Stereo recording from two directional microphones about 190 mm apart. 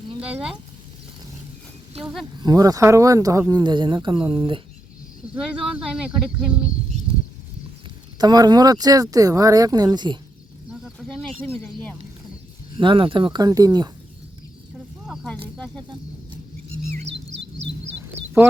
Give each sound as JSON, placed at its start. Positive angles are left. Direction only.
{"t": 2.0, "sound": "speech", "side_deg": 0}
{"t": 2.4, "sound": "speech", "side_deg": -20}
{"t": 5.3, "sound": "speech", "side_deg": -5}
{"t": 8.2, "sound": "speech", "side_deg": -20}
{"t": 10.7, "sound": "a sound", "side_deg": 0}
{"t": 12.7, "sound": "speech", "side_deg": -25}
{"t": 15.0, "sound": "snake", "side_deg": 0}
{"t": 15.5, "sound": "speech", "side_deg": 5}
{"t": 17.1, "sound": "chirp", "side_deg": -70}